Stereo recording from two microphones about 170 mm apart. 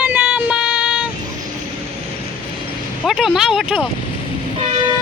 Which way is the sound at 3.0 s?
Centre (ahead or behind).